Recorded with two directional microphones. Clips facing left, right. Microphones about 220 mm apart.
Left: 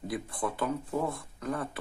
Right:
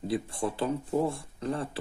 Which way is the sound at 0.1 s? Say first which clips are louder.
Right 4 dB; 30° right (ahead or behind).